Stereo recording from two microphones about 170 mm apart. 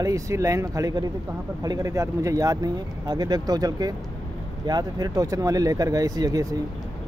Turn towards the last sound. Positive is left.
turn(degrees=-20)  # may be behind; listen again after turning